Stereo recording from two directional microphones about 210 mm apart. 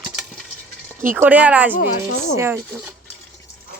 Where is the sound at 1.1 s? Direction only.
5° right (ahead or behind).